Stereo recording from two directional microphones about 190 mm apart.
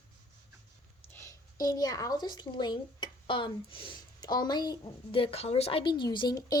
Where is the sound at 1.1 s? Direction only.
15° left (ahead or behind).